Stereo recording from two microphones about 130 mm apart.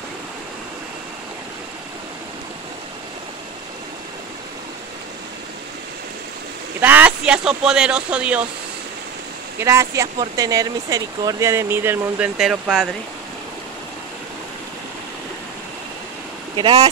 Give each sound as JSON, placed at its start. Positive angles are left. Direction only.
{"t": 6.8, "sound": "speech", "side_deg": -15}
{"t": 9.6, "sound": "speech", "side_deg": -20}
{"t": 12.4, "sound": "speech", "side_deg": -5}
{"t": 16.5, "sound": "speech", "side_deg": -35}